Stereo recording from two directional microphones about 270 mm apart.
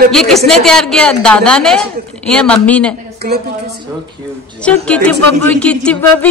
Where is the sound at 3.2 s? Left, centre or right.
Right.